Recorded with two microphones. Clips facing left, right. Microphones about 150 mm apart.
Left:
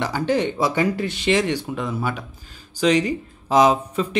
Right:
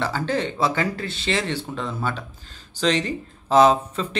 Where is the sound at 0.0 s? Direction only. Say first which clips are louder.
Left 3 dB; 15° left (ahead or behind).